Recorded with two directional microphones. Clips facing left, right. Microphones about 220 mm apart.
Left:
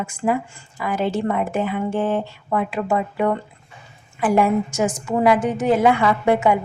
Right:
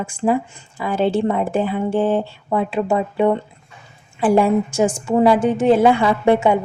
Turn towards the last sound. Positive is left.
turn(degrees=-30)  # may be behind; listen again after turning